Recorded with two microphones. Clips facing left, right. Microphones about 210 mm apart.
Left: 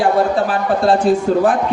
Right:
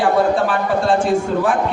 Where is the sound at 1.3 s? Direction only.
35° left (ahead or behind).